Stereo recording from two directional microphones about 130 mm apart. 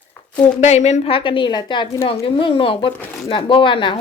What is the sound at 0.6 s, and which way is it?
Speech, 60° left (ahead or behind).